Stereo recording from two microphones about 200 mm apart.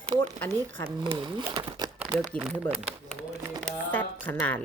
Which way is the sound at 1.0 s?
25° right (ahead or behind).